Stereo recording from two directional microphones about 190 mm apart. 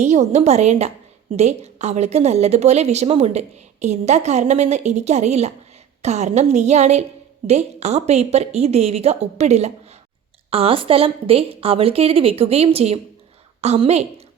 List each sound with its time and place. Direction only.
0.0 s a woman's voice: 35° right (ahead or behind)